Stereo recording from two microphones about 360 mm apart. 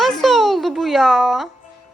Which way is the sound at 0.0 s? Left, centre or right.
Centre.